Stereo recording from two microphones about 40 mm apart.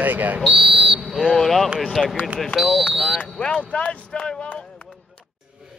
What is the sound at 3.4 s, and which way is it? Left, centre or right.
Speech, left.